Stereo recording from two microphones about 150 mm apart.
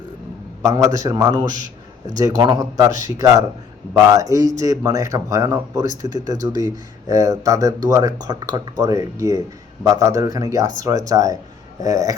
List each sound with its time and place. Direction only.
0.6 s speech: 20° right (ahead or behind)